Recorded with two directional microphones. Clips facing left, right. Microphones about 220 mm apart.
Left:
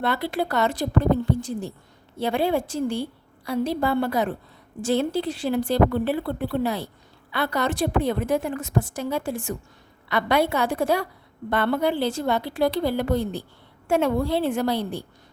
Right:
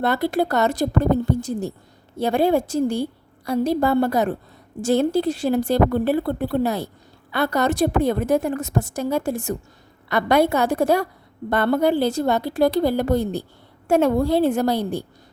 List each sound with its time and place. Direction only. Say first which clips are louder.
0.0 s a woman's voice: right 5 dB; 45° right (ahead or behind)